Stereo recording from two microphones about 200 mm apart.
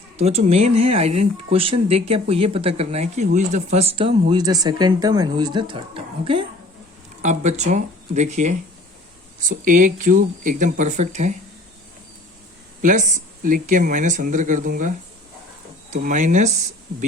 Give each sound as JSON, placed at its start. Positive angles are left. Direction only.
{"t": 0.2, "sound": "a woman's voice", "side_deg": -30}
{"t": 12.8, "sound": "speech", "side_deg": -40}